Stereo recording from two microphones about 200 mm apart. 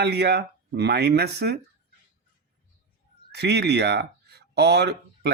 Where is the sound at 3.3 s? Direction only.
55° right (ahead or behind).